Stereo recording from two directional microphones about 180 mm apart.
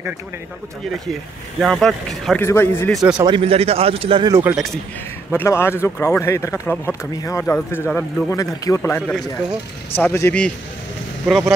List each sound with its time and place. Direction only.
1.6 s a man's voice: centre (ahead or behind)
2.4 s speech: 15° left (ahead or behind)
3.2 s speech: 25° right (ahead or behind)
4.3 s speech: 10° right (ahead or behind)
5.3 s speech: 15° left (ahead or behind)
11.2 s a man's voice: centre (ahead or behind)